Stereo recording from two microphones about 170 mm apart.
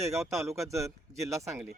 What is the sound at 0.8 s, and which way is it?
Speech, 15° right (ahead or behind).